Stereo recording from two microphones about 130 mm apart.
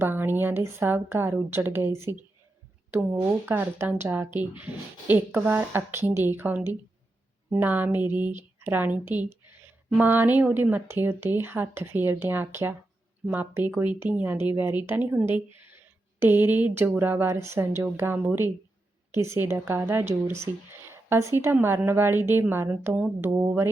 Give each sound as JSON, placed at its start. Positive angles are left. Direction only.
{"t": 0.0, "sound": "a woman's voice", "side_deg": -15}